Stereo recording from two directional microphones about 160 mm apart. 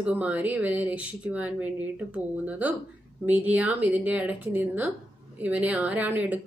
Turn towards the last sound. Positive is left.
turn(degrees=-10)  # may be behind; listen again after turning